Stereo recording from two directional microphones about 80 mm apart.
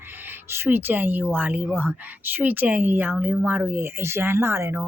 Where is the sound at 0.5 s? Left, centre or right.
Right.